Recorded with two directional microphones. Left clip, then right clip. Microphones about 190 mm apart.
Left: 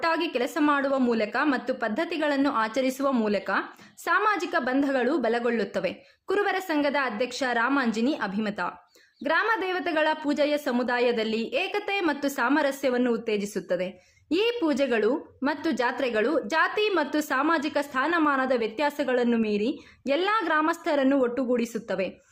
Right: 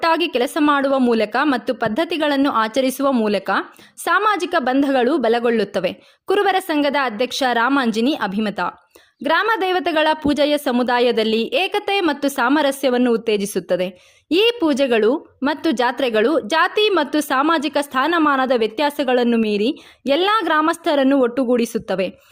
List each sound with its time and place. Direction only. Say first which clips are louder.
0.0 s a woman's voice: right 8 dB; 45° right (ahead or behind)